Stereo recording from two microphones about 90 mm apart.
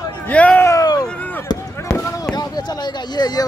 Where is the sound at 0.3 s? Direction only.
15° left (ahead or behind).